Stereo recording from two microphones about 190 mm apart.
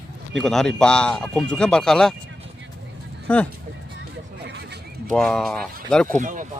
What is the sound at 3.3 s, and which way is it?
Speech, 5° left (ahead or behind).